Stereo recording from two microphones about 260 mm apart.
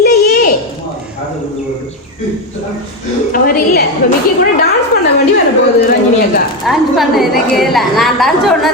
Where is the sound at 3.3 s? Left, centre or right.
Left.